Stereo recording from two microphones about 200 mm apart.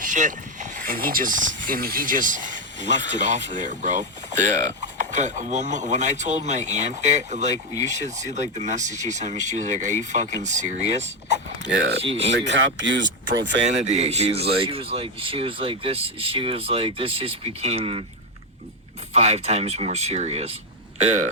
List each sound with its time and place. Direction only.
0.0 s speech: 40° right (ahead or behind)
12.3 s speech: 65° right (ahead or behind)
13.8 s speech: 35° right (ahead or behind)
19.1 s speech: 30° right (ahead or behind)